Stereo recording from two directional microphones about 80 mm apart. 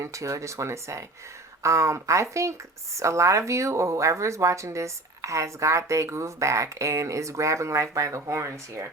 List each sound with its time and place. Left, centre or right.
0.0 s speech: right